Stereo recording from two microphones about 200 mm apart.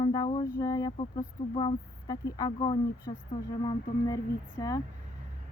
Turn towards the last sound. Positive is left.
turn(degrees=20)  # may be behind; listen again after turning